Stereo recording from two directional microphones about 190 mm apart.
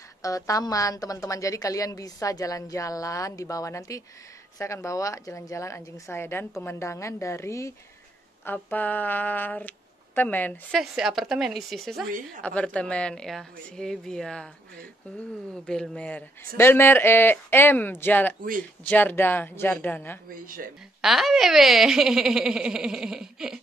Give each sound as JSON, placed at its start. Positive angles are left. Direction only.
{"t": 0.2, "sound": "a woman's voice", "side_deg": 20}
{"t": 15.5, "sound": "a woman's voice", "side_deg": 5}
{"t": 20.2, "sound": "speech", "side_deg": -45}
{"t": 21.0, "sound": "speech", "side_deg": 0}